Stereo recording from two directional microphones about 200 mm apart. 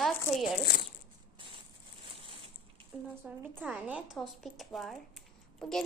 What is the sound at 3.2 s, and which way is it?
A woman's voice, 10° right (ahead or behind).